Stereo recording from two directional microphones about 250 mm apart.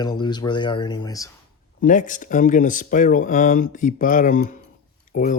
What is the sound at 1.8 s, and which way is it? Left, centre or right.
Speech, left.